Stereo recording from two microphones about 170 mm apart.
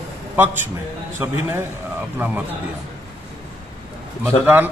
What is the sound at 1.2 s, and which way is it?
Speech, 15° right (ahead or behind).